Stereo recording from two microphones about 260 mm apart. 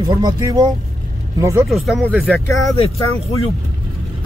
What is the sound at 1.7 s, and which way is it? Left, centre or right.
Speech, centre.